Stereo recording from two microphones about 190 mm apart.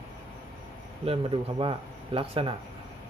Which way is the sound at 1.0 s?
30° right (ahead or behind).